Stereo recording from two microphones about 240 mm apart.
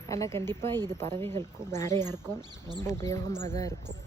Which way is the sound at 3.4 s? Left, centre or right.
Right.